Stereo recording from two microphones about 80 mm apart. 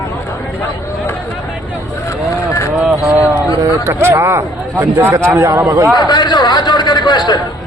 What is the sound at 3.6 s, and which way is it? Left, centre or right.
A man's voice, right.